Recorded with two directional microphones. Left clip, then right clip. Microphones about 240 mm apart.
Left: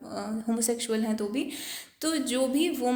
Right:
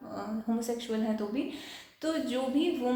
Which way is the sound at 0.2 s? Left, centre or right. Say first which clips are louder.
Left 4 dB; left.